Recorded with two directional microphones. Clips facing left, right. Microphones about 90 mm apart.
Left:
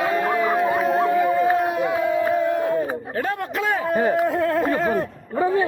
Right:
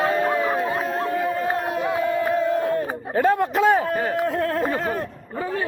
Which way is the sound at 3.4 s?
30° right (ahead or behind).